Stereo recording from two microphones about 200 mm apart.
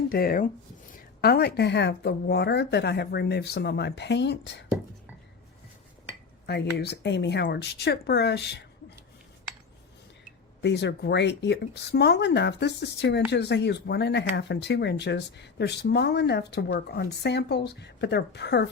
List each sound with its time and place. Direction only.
0.1 s speech: 45° left (ahead or behind)
6.4 s speech: 55° left (ahead or behind)
10.6 s speech: 55° left (ahead or behind)